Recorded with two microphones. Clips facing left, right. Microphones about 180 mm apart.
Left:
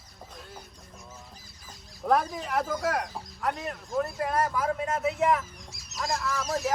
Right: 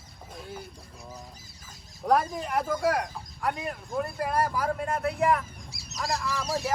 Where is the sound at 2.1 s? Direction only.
Centre (ahead or behind).